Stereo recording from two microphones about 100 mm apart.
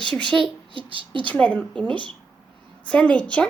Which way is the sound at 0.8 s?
60° right (ahead or behind).